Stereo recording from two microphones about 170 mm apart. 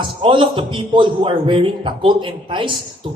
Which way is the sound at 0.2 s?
30° right (ahead or behind).